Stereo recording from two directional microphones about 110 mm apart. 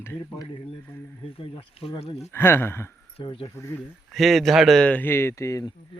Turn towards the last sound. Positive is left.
turn(degrees=30)  # may be behind; listen again after turning